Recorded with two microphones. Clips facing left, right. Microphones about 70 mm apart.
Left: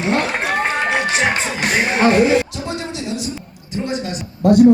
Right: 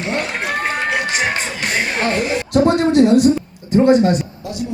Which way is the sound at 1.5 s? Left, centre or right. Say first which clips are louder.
Left 2 dB; left.